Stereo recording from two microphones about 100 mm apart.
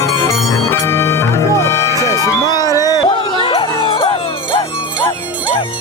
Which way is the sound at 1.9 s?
35° right (ahead or behind).